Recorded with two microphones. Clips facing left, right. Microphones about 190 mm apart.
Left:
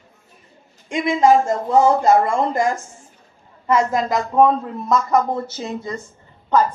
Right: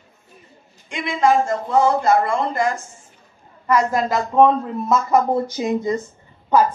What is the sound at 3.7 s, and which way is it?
Speech, 25° left (ahead or behind).